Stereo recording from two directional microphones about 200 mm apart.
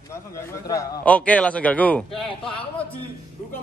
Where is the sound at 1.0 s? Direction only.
5° left (ahead or behind).